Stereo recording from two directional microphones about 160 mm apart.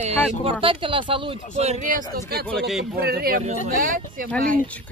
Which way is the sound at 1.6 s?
50° right (ahead or behind).